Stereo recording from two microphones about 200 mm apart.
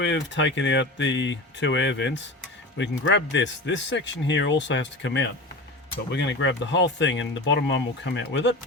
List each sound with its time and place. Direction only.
0.0 s speech: 65° left (ahead or behind)